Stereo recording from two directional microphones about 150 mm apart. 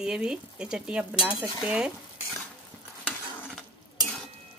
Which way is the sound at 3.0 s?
10° left (ahead or behind).